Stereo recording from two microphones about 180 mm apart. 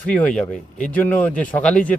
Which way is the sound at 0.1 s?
5° left (ahead or behind).